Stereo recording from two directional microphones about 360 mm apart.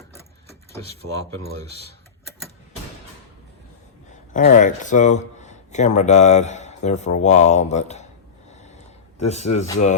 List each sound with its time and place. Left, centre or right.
4.4 s a man's voice: left
9.5 s a man's voice: centre